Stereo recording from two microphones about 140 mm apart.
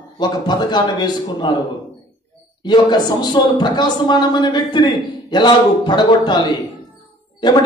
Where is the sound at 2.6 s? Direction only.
30° left (ahead or behind).